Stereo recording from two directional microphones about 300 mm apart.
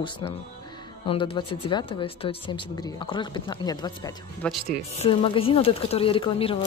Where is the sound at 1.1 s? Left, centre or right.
Centre.